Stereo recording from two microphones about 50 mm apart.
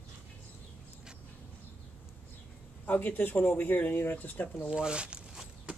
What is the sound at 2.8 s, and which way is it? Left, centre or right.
Speech, left.